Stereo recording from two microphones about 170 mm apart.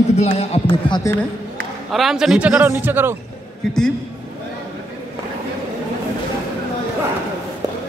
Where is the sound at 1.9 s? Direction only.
Centre (ahead or behind).